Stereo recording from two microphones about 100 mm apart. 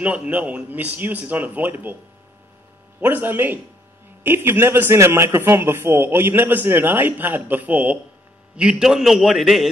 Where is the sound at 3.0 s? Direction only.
20° right (ahead or behind).